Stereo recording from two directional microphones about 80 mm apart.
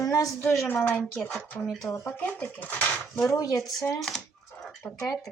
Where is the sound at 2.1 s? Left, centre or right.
Left.